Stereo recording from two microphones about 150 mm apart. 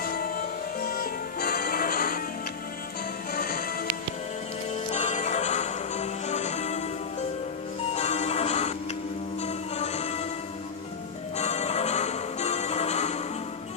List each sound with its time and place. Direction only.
0.0 s music: 75° left (ahead or behind)
3.3 s music: 70° left (ahead or behind)
4.7 s music: 45° left (ahead or behind)
11.3 s music: 50° left (ahead or behind)